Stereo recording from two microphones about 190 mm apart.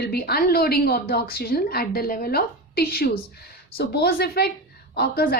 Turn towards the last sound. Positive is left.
turn(degrees=55)  # may be behind; listen again after turning